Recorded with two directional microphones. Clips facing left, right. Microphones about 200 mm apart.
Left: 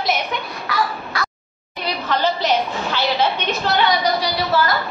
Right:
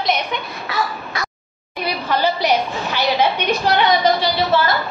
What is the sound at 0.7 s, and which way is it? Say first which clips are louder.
Caw: left 1 dB; 25° right (ahead or behind).